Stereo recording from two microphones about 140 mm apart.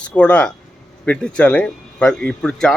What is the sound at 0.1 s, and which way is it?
Speech, 10° left (ahead or behind).